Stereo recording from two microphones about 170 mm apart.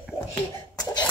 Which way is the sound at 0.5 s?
25° left (ahead or behind).